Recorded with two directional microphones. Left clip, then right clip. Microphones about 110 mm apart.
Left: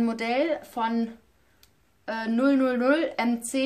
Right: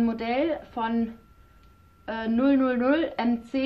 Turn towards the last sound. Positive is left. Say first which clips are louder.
# left 1 dB
turn(degrees=35)  # may be behind; listen again after turning